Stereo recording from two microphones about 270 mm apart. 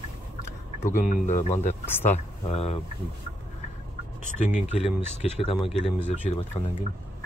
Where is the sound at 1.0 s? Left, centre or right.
Left.